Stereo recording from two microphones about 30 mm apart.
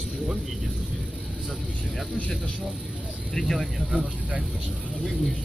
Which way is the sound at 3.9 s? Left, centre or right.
Right.